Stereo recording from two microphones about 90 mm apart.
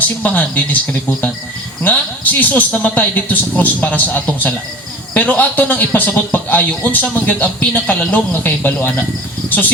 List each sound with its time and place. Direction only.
0.2 s speech: 15° left (ahead or behind)
1.8 s a man's voice: 20° left (ahead or behind)